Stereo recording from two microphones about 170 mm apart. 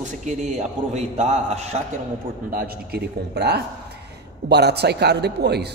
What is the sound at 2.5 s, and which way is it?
Speech, 60° right (ahead or behind).